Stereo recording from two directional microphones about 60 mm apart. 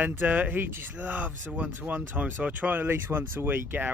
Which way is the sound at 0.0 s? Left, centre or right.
Right.